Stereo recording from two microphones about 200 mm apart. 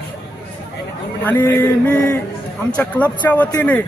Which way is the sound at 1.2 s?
10° left (ahead or behind).